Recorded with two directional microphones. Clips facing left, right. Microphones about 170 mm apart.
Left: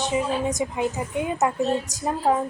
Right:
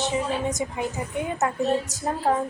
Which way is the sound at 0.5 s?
20° left (ahead or behind).